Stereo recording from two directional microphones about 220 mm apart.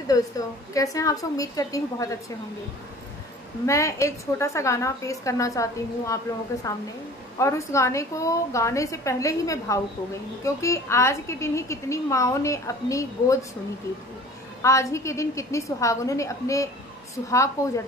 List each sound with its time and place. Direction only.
0.1 s a woman's voice: 15° left (ahead or behind)
3.6 s a woman's voice: 15° left (ahead or behind)
14.6 s a woman's voice: 15° left (ahead or behind)